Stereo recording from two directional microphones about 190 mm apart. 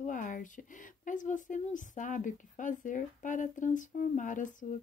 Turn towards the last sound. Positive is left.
turn(degrees=40)  # may be behind; listen again after turning